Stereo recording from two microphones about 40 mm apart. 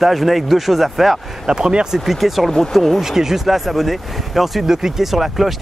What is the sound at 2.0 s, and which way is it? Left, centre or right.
Speech, centre.